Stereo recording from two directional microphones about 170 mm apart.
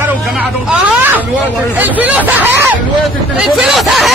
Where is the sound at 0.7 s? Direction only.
10° right (ahead or behind).